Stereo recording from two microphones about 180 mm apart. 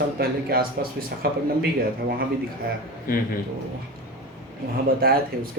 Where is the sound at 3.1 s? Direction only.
50° left (ahead or behind).